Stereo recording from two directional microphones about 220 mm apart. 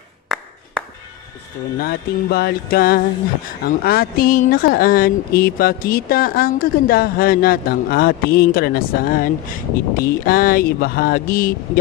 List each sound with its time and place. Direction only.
0.3 s clapping: centre (ahead or behind)
1.8 s speech: 45° left (ahead or behind)